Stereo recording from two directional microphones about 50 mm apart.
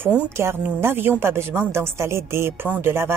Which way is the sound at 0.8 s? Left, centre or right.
Right.